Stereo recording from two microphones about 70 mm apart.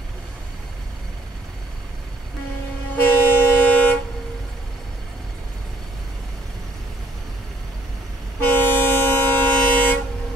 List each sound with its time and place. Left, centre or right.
3.0 s vehicle: left
8.5 s train: left